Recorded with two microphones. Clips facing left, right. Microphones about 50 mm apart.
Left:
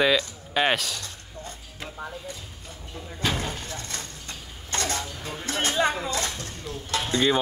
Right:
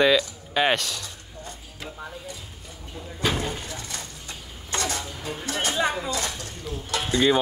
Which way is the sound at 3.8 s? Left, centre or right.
Left.